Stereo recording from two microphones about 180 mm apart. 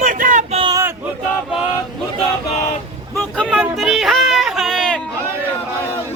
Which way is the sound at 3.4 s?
5° right (ahead or behind).